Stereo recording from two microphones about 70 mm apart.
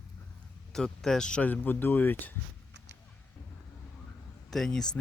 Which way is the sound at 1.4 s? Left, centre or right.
Left.